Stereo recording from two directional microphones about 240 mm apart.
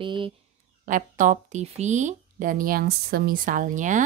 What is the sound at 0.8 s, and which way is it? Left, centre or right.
Speech, right.